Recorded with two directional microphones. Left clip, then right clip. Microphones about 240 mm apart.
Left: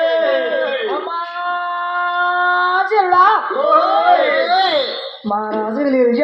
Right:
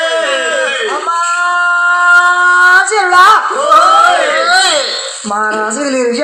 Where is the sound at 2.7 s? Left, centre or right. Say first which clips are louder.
Right 5 dB; right.